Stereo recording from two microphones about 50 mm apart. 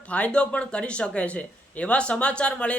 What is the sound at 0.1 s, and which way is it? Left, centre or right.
Speech, left.